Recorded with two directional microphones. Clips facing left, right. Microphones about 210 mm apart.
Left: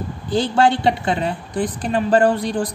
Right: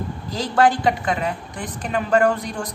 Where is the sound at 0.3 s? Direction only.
30° left (ahead or behind).